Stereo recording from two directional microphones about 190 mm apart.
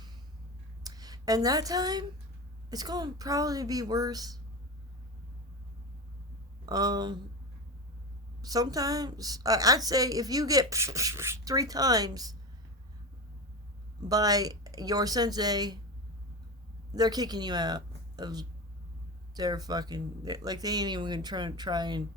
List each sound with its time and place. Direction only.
0.9 s a woman's voice: 20° right (ahead or behind)
6.7 s a woman's voice: 20° right (ahead or behind)
8.4 s a woman's voice: 20° right (ahead or behind)
14.1 s a woman's voice: 20° right (ahead or behind)
16.9 s a woman's voice: 20° right (ahead or behind)